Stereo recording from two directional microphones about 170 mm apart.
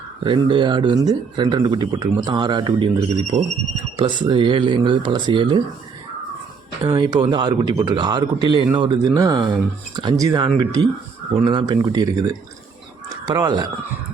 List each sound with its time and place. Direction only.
0.2 s a man's voice: 30° right (ahead or behind)
6.8 s a man's voice: 25° right (ahead or behind)